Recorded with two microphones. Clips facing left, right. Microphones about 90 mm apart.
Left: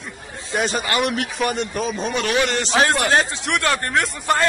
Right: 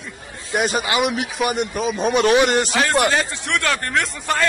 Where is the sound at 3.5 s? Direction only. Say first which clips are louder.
Even; 15° left (ahead or behind).